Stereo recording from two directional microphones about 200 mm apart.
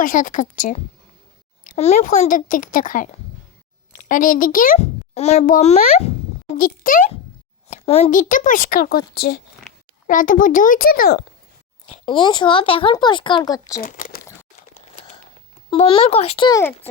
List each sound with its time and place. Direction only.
0.0 s a child's voice: 40° left (ahead or behind)
6.6 s speech: 45° left (ahead or behind)
7.7 s speech: 30° left (ahead or behind); by 11.2 s 50° left (ahead or behind)
12.0 s speech: 25° left (ahead or behind)
13.8 s speech: 45° left (ahead or behind)
14.9 s a sound: 30° left (ahead or behind)
15.7 s speech: 25° left (ahead or behind)